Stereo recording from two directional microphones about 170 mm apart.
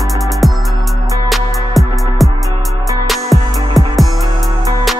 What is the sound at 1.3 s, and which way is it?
Music, centre (ahead or behind).